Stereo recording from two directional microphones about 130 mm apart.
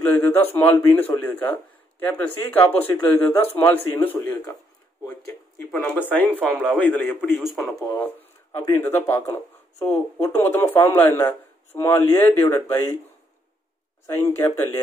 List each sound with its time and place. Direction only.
0.1 s speech: 15° left (ahead or behind)
5.8 s speech: 15° left (ahead or behind)
6.2 s speech: 15° right (ahead or behind)
6.8 s speech: 15° left (ahead or behind)
7.3 s speech: centre (ahead or behind)
7.9 s speech: 15° left (ahead or behind)
8.5 s a man's voice: 25° left (ahead or behind)
14.0 s a man's voice: 20° left (ahead or behind)